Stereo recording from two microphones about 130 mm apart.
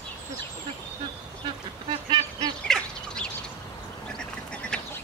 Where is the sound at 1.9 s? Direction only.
35° right (ahead or behind).